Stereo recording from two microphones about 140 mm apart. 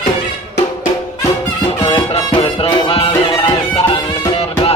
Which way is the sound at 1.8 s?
40° left (ahead or behind).